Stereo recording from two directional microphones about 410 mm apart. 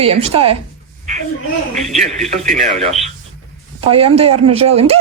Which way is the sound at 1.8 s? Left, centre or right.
Centre.